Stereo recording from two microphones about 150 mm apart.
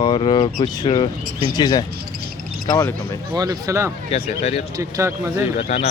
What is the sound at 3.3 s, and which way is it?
Speech, 25° right (ahead or behind).